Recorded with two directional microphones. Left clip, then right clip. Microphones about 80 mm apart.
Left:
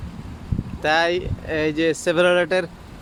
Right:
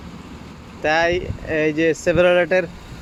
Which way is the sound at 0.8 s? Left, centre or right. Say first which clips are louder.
Right 1 dB; centre.